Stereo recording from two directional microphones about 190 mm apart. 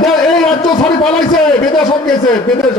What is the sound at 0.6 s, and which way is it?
A man's voice, 20° left (ahead or behind).